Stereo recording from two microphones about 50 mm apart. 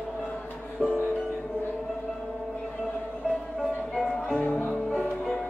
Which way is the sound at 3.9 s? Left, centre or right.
Centre.